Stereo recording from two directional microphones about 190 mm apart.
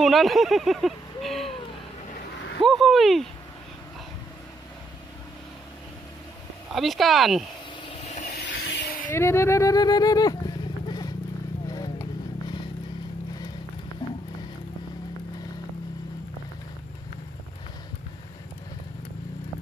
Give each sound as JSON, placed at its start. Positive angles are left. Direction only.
{"t": 0.0, "sound": "speech", "side_deg": 0}
{"t": 2.6, "sound": "speech", "side_deg": 0}
{"t": 6.7, "sound": "speech", "side_deg": 0}
{"t": 7.9, "sound": "vehicle", "side_deg": 40}
{"t": 8.3, "sound": "vehicle", "side_deg": 55}
{"t": 9.0, "sound": "speech", "side_deg": 15}
{"t": 11.6, "sound": "vehicle", "side_deg": 20}
{"t": 14.0, "sound": "music", "side_deg": 25}